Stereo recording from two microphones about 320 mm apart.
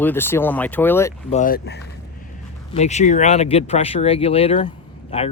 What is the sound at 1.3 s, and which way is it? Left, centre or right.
Speech, left.